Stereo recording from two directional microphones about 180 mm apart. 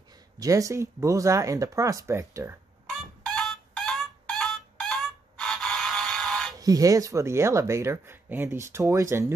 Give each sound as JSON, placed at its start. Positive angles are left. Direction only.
{"t": 0.4, "sound": "speech", "side_deg": -20}
{"t": 3.0, "sound": "a sound", "side_deg": 0}
{"t": 6.5, "sound": "speech", "side_deg": -20}